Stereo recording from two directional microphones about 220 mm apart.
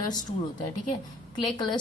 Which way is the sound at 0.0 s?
15° left (ahead or behind).